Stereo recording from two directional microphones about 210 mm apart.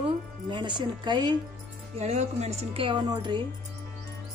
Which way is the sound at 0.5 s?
20° right (ahead or behind).